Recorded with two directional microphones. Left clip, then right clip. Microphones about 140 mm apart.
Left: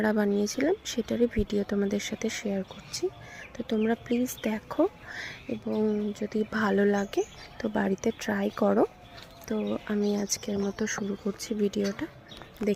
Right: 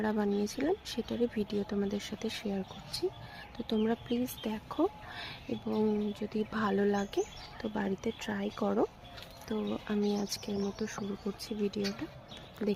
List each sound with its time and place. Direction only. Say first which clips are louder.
0.0 s speech: left 6 dB; 30° left (ahead or behind); by 3.9 s 15° left (ahead or behind)
4.1 s speech: left 6 dB; 30° left (ahead or behind)
9.5 s speech: left 5 dB; 20° left (ahead or behind)
10.8 s speech: left 7 dB; 30° left (ahead or behind)